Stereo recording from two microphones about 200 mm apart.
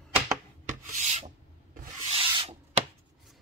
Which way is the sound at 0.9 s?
40° right (ahead or behind).